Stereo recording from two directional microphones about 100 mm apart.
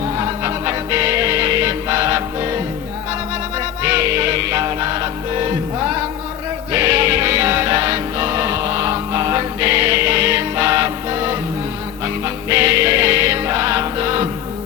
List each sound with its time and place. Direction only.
0.2 s music: 30° right (ahead or behind)
3.8 s music: 30° right (ahead or behind)